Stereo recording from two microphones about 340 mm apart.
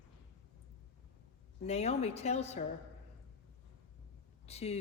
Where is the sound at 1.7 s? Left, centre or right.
Centre.